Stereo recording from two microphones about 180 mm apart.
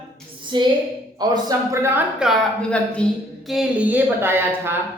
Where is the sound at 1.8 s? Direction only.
10° right (ahead or behind).